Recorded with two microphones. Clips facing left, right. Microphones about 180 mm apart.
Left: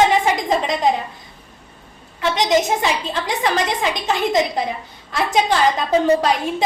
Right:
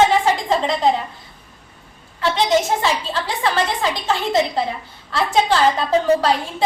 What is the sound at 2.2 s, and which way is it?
A woman's voice, 20° left (ahead or behind).